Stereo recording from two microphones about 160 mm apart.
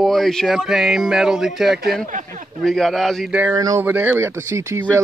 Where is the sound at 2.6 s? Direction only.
Centre (ahead or behind).